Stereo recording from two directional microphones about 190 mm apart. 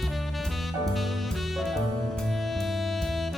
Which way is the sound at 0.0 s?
Centre (ahead or behind).